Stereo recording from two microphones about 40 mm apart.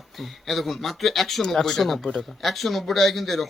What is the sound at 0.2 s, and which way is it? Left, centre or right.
A man's voice, centre.